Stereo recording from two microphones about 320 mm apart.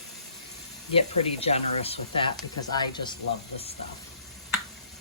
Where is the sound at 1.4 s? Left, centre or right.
Centre.